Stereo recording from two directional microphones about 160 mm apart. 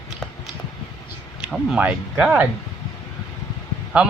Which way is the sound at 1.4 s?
5° right (ahead or behind).